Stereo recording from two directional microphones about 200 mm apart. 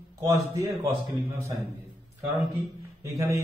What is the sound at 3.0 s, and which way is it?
Speech, 15° right (ahead or behind).